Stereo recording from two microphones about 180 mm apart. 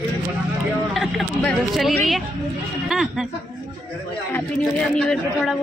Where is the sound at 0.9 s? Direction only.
Centre (ahead or behind).